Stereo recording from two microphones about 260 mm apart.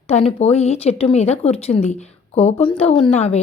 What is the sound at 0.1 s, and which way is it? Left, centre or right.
A woman's voice, left.